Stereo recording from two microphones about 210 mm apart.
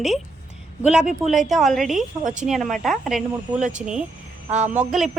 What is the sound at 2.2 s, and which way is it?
Speech, 35° right (ahead or behind).